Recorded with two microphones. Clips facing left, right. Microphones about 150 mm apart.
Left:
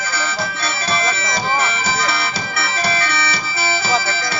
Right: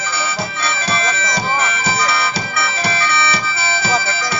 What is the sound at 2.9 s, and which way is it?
Music, 40° left (ahead or behind).